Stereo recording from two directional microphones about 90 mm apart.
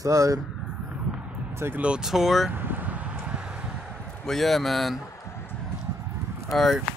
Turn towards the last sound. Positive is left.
turn(degrees=0)  # may be behind; listen again after turning